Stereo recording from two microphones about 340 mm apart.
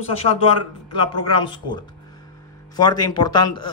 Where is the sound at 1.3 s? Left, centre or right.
Centre.